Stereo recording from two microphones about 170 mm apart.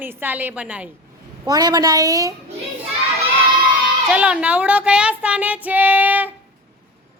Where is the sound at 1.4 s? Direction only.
25° right (ahead or behind).